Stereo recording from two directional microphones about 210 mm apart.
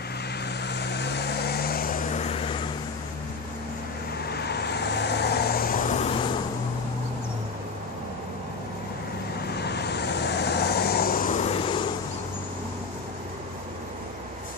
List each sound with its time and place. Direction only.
0.7 s vehicle: 55° left (ahead or behind); by 2.5 s 30° left (ahead or behind)
4.3 s vehicle: 50° left (ahead or behind); by 6.2 s 30° left (ahead or behind)
9.5 s vehicle: 50° left (ahead or behind); by 11.8 s 25° left (ahead or behind)